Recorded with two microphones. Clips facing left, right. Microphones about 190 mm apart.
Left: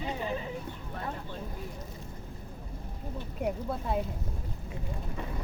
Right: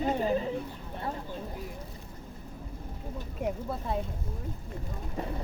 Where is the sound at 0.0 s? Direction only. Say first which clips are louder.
Right 6 dB; 45° right (ahead or behind).